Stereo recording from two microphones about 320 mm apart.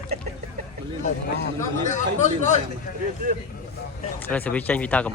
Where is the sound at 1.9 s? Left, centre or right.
Left.